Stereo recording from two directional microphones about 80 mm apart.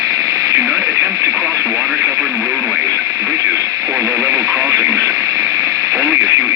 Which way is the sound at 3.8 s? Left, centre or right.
Right.